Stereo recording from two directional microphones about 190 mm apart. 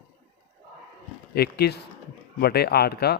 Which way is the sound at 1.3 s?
55° left (ahead or behind).